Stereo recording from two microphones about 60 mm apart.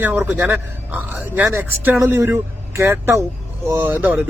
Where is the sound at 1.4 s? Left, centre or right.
Right.